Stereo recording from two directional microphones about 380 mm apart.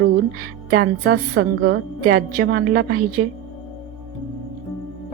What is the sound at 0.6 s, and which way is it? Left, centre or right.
A woman's voice, right.